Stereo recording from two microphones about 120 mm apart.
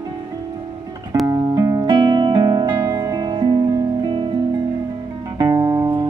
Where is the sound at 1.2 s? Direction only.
30° right (ahead or behind).